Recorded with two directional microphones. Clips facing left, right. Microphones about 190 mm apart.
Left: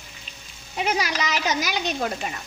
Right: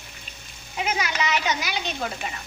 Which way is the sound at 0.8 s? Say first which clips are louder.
Left 1 dB; 35° left (ahead or behind).